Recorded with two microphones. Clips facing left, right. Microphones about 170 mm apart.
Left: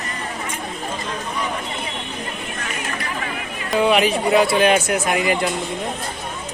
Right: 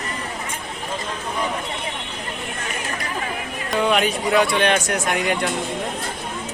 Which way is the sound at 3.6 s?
5° left (ahead or behind).